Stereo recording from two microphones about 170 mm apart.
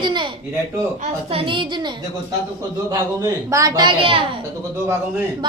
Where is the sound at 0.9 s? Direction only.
40° right (ahead or behind).